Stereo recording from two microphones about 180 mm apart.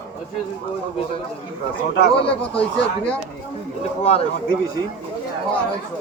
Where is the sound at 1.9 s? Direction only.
65° left (ahead or behind).